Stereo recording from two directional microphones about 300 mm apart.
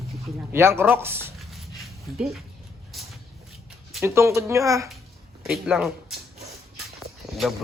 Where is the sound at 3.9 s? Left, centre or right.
Centre.